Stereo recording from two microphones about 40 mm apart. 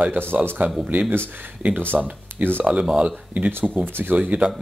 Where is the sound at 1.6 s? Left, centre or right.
Right.